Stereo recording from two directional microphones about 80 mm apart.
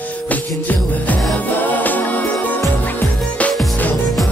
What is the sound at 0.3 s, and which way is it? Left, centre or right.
Music, centre.